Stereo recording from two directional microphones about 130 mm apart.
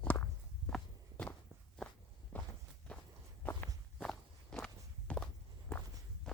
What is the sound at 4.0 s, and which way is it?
Walk, 5° left (ahead or behind).